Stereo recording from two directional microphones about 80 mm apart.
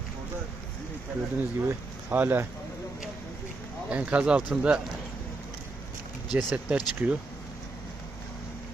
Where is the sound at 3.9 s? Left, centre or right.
Centre.